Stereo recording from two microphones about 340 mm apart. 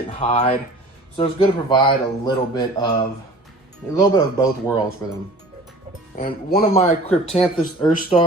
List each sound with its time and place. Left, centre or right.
0.2 s speech: centre
3.9 s speech: centre
6.1 s speech: left